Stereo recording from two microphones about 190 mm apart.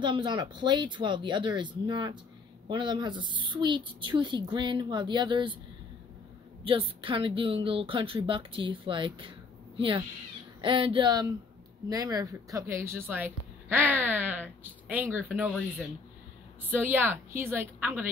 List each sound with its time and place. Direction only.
0.0 s a woman's voice: 25° right (ahead or behind)
6.6 s a woman's voice: 30° right (ahead or behind); by 15.5 s 10° right (ahead or behind)
16.7 s a woman's voice: 10° right (ahead or behind)